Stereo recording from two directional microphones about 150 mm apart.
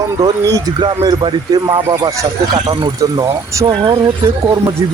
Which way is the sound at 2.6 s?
35° right (ahead or behind).